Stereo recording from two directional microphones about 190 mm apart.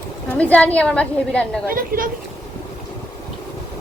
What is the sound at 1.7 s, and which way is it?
Speech, 50° right (ahead or behind).